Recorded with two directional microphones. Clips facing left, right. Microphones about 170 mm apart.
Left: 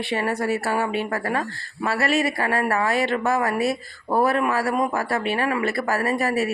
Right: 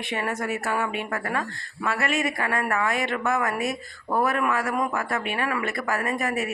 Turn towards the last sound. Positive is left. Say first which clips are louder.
# left 4 dB
turn(degrees=35)  # may be behind; listen again after turning